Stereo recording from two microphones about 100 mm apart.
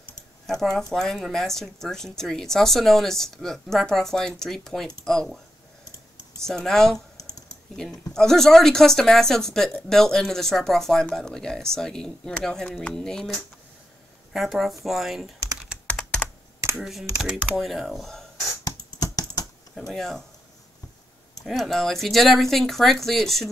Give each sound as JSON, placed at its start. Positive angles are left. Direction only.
{"t": 0.5, "sound": "speech", "side_deg": 5}
{"t": 6.4, "sound": "speech", "side_deg": 5}
{"t": 15.9, "sound": "computer keyboard", "side_deg": 10}
{"t": 16.6, "sound": "computer keyboard", "side_deg": -25}
{"t": 17.2, "sound": "speech", "side_deg": 0}
{"t": 18.6, "sound": "computer keyboard", "side_deg": 40}
{"t": 19.9, "sound": "speech", "side_deg": 5}
{"t": 21.5, "sound": "speech", "side_deg": 0}